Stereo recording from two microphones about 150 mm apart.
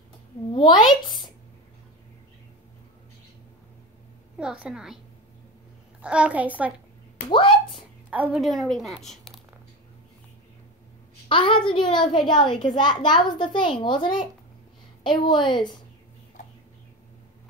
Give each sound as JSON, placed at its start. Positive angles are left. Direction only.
{"t": 0.5, "sound": "speech", "side_deg": 30}
{"t": 4.4, "sound": "a woman's voice", "side_deg": -5}
{"t": 7.2, "sound": "speech", "side_deg": 35}
{"t": 8.1, "sound": "a woman's voice", "side_deg": -5}
{"t": 11.2, "sound": "a child's voice", "side_deg": 35}